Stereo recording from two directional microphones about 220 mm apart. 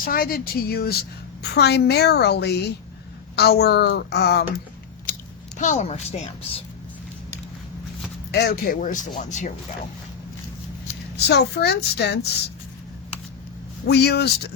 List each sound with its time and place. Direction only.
0.0 s a woman's voice: 40° left (ahead or behind)
5.5 s a woman's voice: 35° left (ahead or behind)
8.3 s speech: 45° left (ahead or behind)
11.3 s a woman's voice: 50° left (ahead or behind)
13.8 s a woman's voice: 50° left (ahead or behind)